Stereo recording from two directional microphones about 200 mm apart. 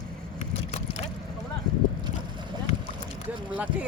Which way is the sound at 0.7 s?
35° left (ahead or behind).